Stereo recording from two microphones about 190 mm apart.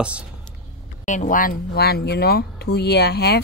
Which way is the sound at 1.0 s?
40° left (ahead or behind).